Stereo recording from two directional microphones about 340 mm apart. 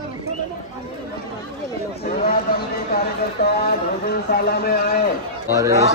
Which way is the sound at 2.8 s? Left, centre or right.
Left.